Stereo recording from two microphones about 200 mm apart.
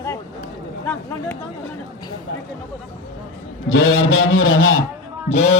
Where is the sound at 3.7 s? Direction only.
90° left.